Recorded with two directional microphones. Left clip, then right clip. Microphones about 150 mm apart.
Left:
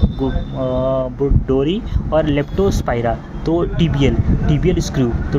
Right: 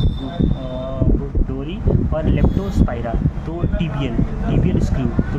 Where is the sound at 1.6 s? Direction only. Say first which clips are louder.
Left 4 dB; 50° left (ahead or behind).